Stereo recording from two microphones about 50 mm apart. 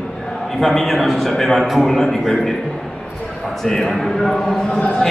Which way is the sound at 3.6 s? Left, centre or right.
Centre.